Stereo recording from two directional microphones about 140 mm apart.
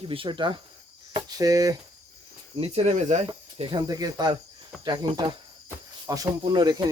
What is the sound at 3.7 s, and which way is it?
Speech, 30° right (ahead or behind).